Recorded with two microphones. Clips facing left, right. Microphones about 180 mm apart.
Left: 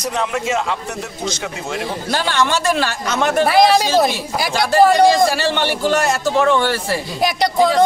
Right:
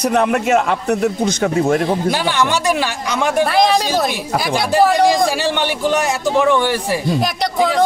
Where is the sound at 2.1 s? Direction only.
15° right (ahead or behind).